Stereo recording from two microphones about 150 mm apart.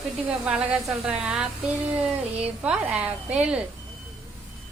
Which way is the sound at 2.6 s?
10° right (ahead or behind).